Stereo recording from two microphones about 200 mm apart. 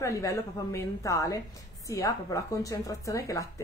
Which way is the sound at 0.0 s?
15° left (ahead or behind).